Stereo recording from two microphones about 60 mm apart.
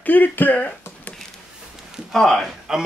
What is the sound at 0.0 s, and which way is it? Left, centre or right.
Speech, left.